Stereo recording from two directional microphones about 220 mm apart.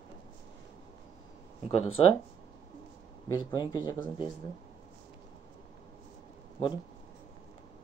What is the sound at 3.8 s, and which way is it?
Speech, 15° left (ahead or behind).